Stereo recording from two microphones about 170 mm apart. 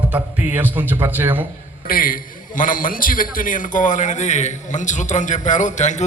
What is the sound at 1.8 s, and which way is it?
A man's voice, 55° left (ahead or behind).